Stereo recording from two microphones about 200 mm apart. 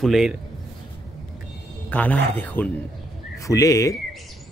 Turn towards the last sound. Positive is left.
turn(degrees=15)  # may be behind; listen again after turning